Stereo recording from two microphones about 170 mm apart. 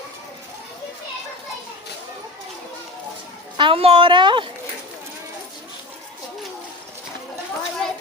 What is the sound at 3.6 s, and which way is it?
Speech, 35° right (ahead or behind).